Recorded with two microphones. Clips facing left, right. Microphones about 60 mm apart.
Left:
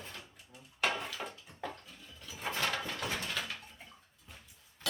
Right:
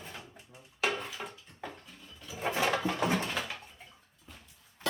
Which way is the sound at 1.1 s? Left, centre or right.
Centre.